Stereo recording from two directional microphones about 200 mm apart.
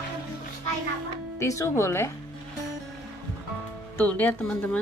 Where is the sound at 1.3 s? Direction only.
15° left (ahead or behind).